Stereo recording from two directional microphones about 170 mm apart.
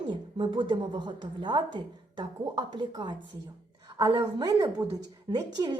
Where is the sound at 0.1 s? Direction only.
30° right (ahead or behind).